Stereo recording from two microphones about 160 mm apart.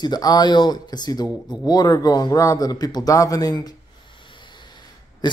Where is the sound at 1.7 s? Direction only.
25° left (ahead or behind).